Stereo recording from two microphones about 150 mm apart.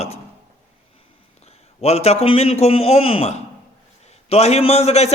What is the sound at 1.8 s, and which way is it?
A man's voice, 45° left (ahead or behind).